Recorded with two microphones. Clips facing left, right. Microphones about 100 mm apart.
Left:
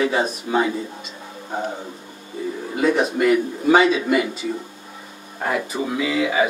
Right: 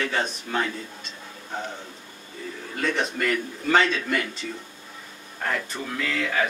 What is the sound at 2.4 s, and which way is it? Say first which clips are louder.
Speech: left 8 dB; 15° left (ahead or behind).